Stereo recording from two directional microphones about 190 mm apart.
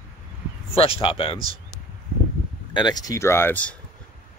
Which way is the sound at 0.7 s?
30° left (ahead or behind).